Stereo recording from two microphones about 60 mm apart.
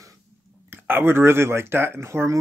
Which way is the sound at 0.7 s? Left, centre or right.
Right.